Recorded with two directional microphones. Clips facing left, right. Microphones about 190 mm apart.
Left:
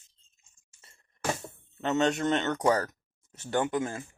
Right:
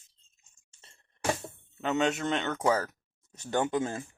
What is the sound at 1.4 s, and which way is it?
Speech, centre (ahead or behind).